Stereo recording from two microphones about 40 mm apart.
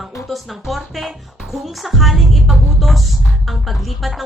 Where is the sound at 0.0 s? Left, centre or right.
Centre.